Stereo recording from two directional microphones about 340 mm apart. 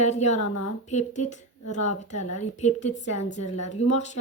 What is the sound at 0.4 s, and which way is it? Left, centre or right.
Speech, left.